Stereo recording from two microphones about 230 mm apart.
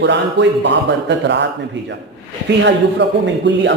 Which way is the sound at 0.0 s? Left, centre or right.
Right.